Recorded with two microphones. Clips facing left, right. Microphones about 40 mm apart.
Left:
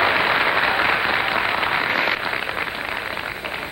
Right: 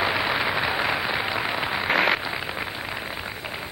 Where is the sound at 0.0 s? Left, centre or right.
Left.